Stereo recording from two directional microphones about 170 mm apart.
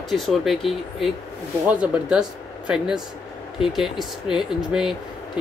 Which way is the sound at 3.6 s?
Centre (ahead or behind).